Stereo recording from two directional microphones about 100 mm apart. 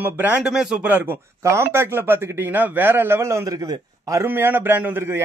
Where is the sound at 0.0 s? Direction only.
20° right (ahead or behind).